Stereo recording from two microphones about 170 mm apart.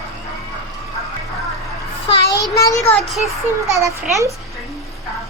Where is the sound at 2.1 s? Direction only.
30° left (ahead or behind).